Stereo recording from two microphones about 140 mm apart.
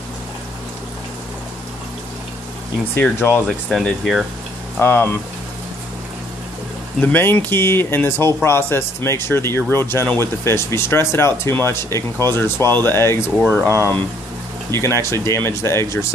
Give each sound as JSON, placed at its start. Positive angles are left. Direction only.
{"t": 3.0, "sound": "speech", "side_deg": 15}
{"t": 3.4, "sound": "speech", "side_deg": 0}
{"t": 4.7, "sound": "speech", "side_deg": 15}
{"t": 7.0, "sound": "speech", "side_deg": 15}